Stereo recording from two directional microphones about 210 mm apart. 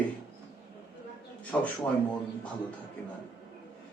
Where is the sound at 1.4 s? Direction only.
5° left (ahead or behind).